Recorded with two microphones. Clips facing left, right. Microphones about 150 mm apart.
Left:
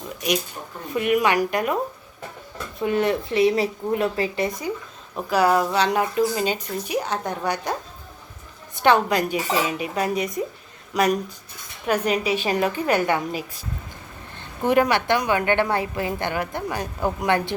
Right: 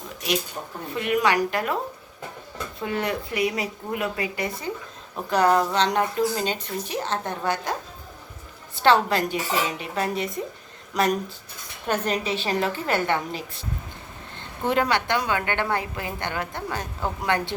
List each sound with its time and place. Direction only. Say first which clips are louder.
0.9 s speech: left 2 dB; 15° left (ahead or behind)
2.8 s speech: left 6 dB; 20° left (ahead or behind)
5.3 s speech: left 1 dB; 10° left (ahead or behind)
8.8 s speech: left 1 dB; 15° left (ahead or behind)
14.3 s a sound: left 4 dB; 15° left (ahead or behind)
15.3 s speech: left 4 dB; 20° left (ahead or behind)